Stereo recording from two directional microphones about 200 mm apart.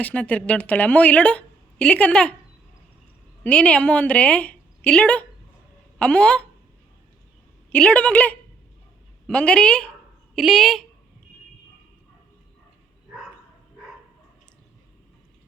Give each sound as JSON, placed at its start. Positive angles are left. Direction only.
{"t": 0.0, "sound": "a woman's voice", "side_deg": 5}
{"t": 3.4, "sound": "a woman's voice", "side_deg": 5}
{"t": 7.7, "sound": "a woman's voice", "side_deg": 5}